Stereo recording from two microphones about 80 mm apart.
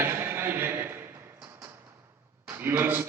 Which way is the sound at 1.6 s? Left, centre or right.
Right.